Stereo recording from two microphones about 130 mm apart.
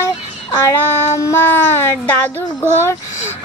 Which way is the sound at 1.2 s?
20° left (ahead or behind).